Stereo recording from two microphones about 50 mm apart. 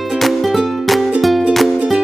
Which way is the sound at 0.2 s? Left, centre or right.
Centre.